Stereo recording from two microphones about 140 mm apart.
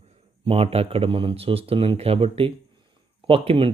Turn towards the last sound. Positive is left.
turn(degrees=-40)  # may be behind; listen again after turning